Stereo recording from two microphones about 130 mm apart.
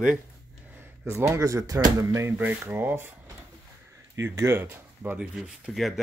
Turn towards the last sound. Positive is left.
turn(degrees=0)  # may be behind; listen again after turning